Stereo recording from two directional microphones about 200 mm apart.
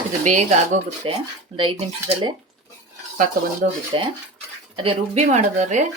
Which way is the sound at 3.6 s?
40° right (ahead or behind).